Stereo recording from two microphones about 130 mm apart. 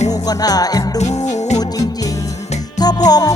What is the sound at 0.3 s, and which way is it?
Music, 30° left (ahead or behind).